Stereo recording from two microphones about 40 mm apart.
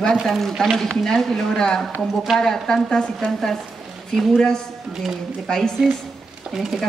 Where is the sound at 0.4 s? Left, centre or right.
Centre.